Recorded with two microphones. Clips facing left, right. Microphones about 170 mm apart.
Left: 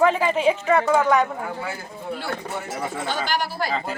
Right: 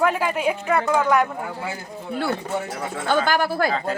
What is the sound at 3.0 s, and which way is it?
Speech, 50° right (ahead or behind).